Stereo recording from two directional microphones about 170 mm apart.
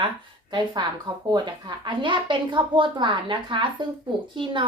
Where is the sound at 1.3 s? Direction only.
25° right (ahead or behind).